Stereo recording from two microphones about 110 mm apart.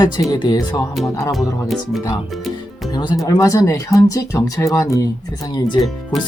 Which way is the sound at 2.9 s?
45° left (ahead or behind).